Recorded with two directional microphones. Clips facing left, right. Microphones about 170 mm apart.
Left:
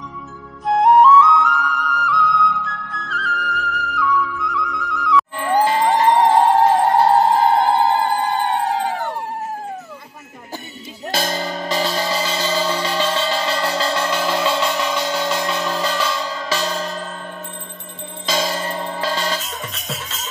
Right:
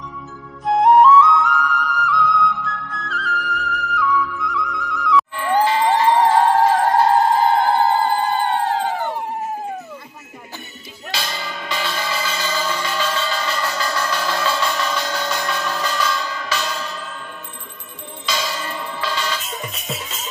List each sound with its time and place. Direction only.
0.7 s music: centre (ahead or behind)
5.5 s music: 15° left (ahead or behind)
7.6 s a sound: 15° left (ahead or behind)
8.9 s a sound: centre (ahead or behind)
11.1 s music: 45° left (ahead or behind)
18.2 s music: 40° left (ahead or behind)
19.5 s music: 5° right (ahead or behind)